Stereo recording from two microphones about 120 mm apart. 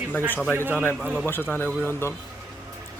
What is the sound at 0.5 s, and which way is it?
Speech, 15° right (ahead or behind).